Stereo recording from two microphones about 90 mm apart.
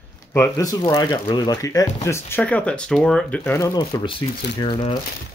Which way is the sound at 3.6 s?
45° left (ahead or behind).